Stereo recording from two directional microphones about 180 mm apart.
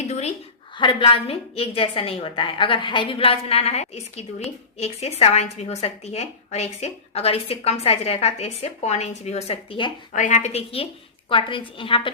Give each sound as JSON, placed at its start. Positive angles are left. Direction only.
{"t": 0.1, "sound": "a sound", "side_deg": 35}
{"t": 0.8, "sound": "a woman's voice", "side_deg": 25}
{"t": 10.1, "sound": "a woman's voice", "side_deg": 45}